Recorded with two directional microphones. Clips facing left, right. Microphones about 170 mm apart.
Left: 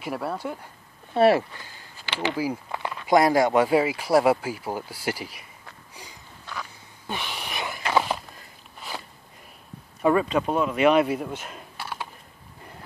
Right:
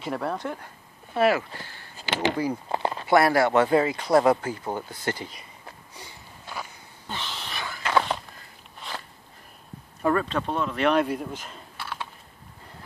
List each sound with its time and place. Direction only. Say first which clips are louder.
0.0 s speech: right 1 dB; 5° left (ahead or behind)
1.1 s speech: left 3 dB; 30° left (ahead or behind)
2.3 s speech: even; 5° left (ahead or behind)
2.7 s a sound: right 5 dB; 35° right (ahead or behind)
3.1 s speech: left 1 dB; 15° left (ahead or behind)
7.1 s a sound: left 3 dB; 15° left (ahead or behind)
10.0 s speech: left 3 dB; 10° left (ahead or behind)